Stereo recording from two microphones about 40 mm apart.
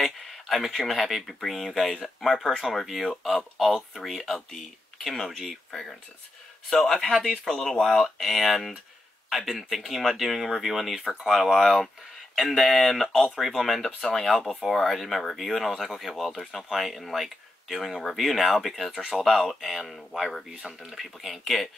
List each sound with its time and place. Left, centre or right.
0.0 s speech: centre